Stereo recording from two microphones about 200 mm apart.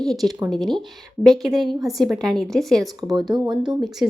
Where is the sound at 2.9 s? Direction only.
20° right (ahead or behind).